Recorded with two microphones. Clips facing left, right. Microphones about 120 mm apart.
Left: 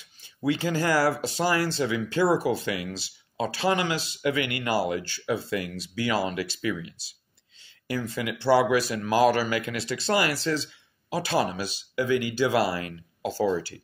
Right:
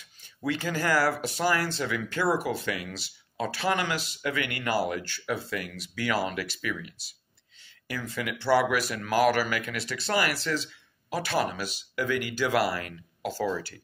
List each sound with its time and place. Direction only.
0.5 s speech: 25° left (ahead or behind)
7.9 s speech: 25° left (ahead or behind)